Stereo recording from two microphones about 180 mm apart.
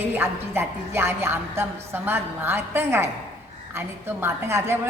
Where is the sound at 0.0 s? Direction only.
10° right (ahead or behind).